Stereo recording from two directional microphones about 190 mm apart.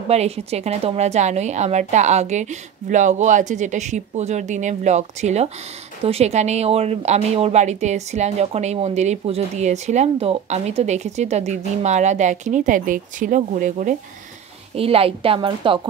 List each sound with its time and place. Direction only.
0.1 s speech: 35° right (ahead or behind)
14.8 s a woman's voice: 30° right (ahead or behind)